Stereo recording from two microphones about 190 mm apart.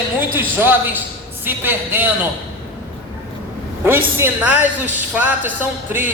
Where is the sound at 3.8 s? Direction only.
10° right (ahead or behind).